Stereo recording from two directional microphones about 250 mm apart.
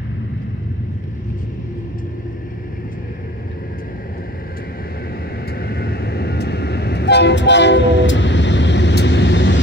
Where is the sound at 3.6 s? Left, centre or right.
Left.